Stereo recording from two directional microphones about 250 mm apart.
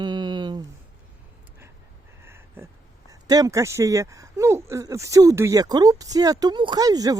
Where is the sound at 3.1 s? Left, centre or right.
Centre.